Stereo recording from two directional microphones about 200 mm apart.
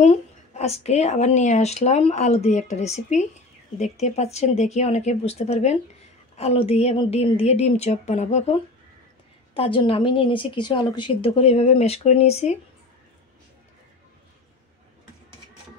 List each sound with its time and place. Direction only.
0.0 s a woman's voice: 35° left (ahead or behind)